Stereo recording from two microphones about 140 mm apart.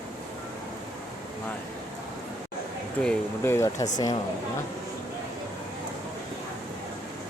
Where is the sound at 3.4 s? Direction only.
20° left (ahead or behind).